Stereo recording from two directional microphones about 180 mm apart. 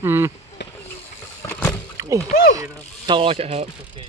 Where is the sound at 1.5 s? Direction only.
10° left (ahead or behind).